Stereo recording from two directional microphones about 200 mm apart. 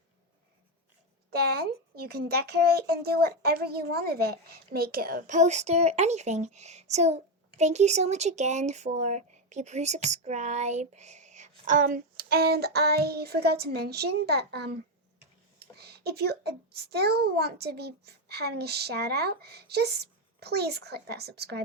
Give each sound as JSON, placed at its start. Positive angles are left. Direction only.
{"t": 1.3, "sound": "a child's voice", "side_deg": -50}